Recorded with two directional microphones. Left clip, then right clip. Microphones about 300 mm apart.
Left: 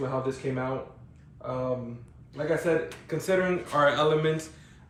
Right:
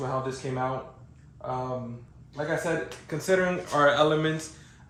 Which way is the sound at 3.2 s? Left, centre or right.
Centre.